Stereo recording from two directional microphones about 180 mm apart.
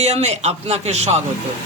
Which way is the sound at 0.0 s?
40° right (ahead or behind).